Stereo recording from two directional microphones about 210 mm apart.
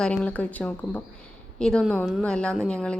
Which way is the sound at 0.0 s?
5° left (ahead or behind).